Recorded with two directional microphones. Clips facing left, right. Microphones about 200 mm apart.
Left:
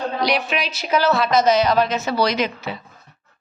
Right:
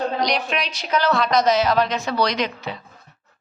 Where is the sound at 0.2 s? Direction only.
5° left (ahead or behind).